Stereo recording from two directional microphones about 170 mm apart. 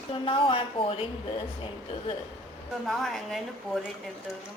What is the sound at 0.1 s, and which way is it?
Speech, 30° left (ahead or behind).